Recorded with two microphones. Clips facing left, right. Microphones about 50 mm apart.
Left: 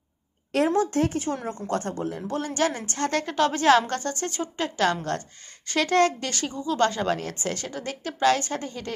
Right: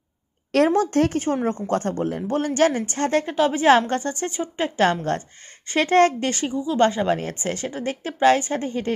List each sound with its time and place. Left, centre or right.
0.7 s speech: right
2.7 s a woman's voice: right
3.8 s a woman's voice: right
6.5 s a woman's voice: centre; by 8.9 s right